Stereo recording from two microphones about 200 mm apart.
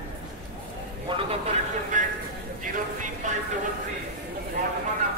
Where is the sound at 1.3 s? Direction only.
30° right (ahead or behind).